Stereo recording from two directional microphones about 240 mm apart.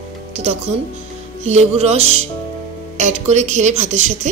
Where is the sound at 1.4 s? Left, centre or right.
Right.